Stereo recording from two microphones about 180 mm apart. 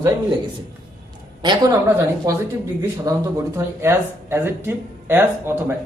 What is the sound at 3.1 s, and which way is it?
Speech, 20° right (ahead or behind).